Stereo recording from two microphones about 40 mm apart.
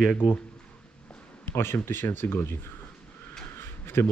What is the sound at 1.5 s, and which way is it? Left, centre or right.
Speech, left.